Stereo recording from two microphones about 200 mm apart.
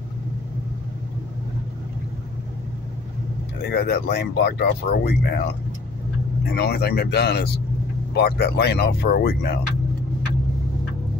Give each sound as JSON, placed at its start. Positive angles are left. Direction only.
{"t": 3.6, "sound": "speech", "side_deg": 50}
{"t": 6.4, "sound": "speech", "side_deg": 55}